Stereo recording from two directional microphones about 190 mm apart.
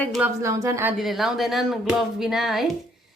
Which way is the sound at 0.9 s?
Centre (ahead or behind).